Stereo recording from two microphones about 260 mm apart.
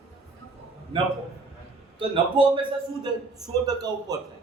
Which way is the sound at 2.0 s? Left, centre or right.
Centre.